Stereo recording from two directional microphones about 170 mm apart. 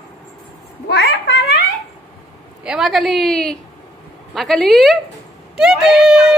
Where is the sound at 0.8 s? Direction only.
85° left.